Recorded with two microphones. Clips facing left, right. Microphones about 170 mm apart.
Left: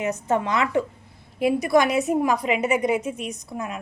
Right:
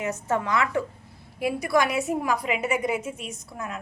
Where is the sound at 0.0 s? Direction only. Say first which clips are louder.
Left 3 dB; 20° left (ahead or behind).